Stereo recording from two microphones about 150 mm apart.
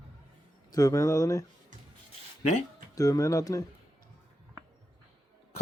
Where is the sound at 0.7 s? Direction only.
20° left (ahead or behind).